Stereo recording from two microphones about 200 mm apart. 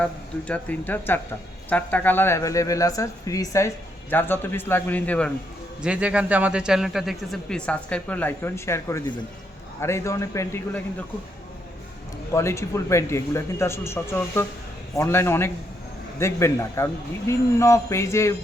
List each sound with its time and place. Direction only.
0.0 s a man's voice: 5° left (ahead or behind)
5.8 s a man's voice: 5° right (ahead or behind); by 10.8 s 10° left (ahead or behind)
12.3 s a man's voice: 15° left (ahead or behind)